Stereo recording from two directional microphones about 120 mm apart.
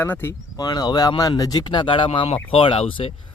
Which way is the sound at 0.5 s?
35° left (ahead or behind).